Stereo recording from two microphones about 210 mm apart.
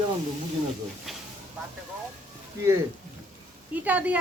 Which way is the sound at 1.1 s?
Centre (ahead or behind).